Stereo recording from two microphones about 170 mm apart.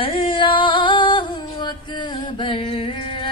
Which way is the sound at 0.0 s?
30° left (ahead or behind).